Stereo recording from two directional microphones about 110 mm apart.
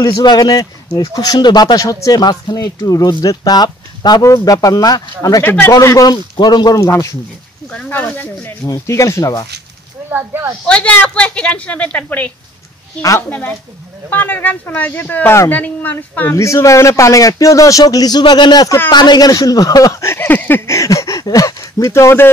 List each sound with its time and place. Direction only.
0.0 s speech: 40° left (ahead or behind)
5.4 s speech: 15° left (ahead or behind)
5.7 s speech: 30° left (ahead or behind)
7.7 s speech: 15° left (ahead or behind)
8.6 s speech: 30° left (ahead or behind)
10.1 s a child's voice: 20° right (ahead or behind)
10.7 s speech: 10° left (ahead or behind)
13.3 s speech: 15° left (ahead or behind)